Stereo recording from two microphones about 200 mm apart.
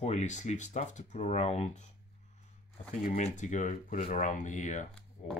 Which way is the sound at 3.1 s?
35° left (ahead or behind).